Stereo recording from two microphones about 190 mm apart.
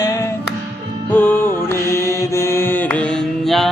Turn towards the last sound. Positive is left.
turn(degrees=0)  # may be behind; listen again after turning